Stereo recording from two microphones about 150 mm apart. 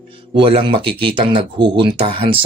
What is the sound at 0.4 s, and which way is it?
Speech, 35° right (ahead or behind).